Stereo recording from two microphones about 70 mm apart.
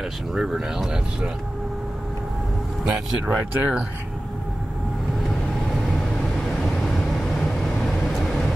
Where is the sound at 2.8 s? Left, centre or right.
Right.